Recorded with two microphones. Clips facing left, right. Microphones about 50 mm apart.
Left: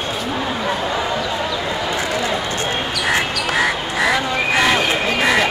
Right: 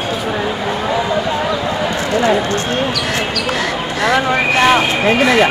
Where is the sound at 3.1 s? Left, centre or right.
Centre.